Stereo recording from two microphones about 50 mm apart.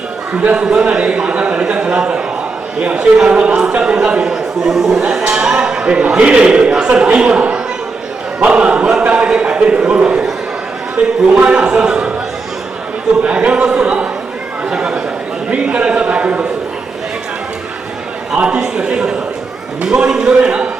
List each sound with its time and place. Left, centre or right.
0.5 s a man's voice: centre
8.4 s choir: right
9.0 s a sound: right
9.4 s a man's voice: right
13.2 s speech: right
14.7 s chatter: centre
15.4 s a sound: right
18.3 s a man's voice: centre